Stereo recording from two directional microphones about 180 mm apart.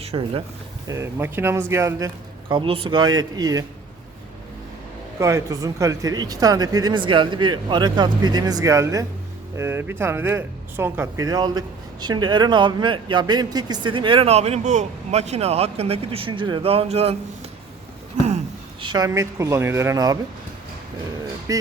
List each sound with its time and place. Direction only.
0.0 s speech: 30° right (ahead or behind)
0.9 s speech: 15° right (ahead or behind)
5.2 s speech: 20° right (ahead or behind); by 17.2 s 35° right (ahead or behind)
18.8 s speech: 25° right (ahead or behind)
21.5 s speech: 20° right (ahead or behind)